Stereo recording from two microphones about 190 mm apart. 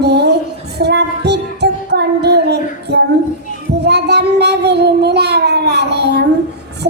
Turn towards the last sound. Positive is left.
turn(degrees=-60)  # may be behind; listen again after turning